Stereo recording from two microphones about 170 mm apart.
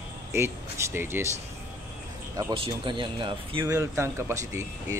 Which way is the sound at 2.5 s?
30° right (ahead or behind).